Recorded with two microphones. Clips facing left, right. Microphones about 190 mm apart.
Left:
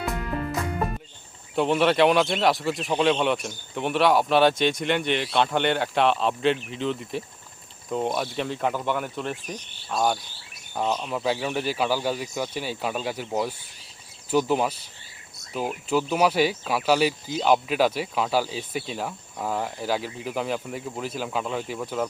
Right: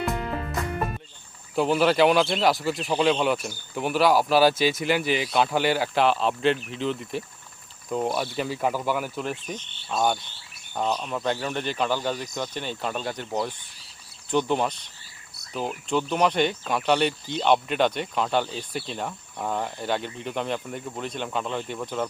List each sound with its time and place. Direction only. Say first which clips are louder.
1.5 s speech: even; centre (ahead or behind)